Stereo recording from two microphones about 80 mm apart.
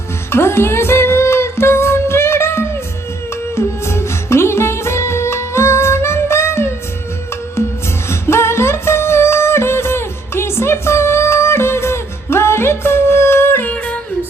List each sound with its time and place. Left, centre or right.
0.3 s music: left
8.1 s music: left
13.7 s music: centre